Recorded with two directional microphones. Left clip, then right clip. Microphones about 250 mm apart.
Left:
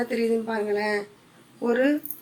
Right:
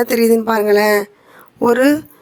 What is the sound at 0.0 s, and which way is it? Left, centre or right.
A woman's voice, right.